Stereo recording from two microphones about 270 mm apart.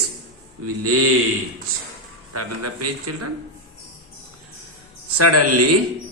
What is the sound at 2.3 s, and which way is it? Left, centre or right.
Speech, right.